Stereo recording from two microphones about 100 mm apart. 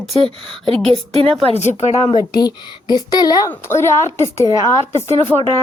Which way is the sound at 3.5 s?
25° left (ahead or behind).